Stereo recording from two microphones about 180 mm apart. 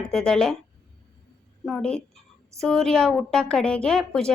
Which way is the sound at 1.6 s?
5° left (ahead or behind).